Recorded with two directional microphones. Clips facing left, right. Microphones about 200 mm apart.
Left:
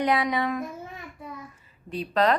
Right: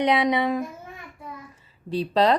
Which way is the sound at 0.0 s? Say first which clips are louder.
Right 3 dB; 25° right (ahead or behind).